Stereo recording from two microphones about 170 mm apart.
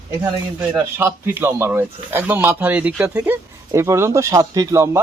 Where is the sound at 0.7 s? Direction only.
15° right (ahead or behind).